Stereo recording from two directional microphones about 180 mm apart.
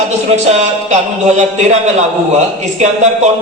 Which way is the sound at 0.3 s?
40° right (ahead or behind).